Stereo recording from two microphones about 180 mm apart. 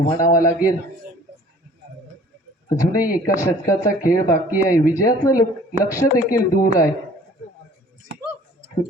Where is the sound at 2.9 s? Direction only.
50° left (ahead or behind).